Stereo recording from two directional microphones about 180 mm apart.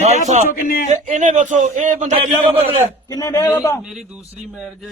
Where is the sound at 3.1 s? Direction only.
20° left (ahead or behind).